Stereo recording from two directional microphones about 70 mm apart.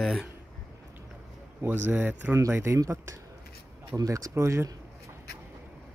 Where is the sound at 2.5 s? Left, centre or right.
Right.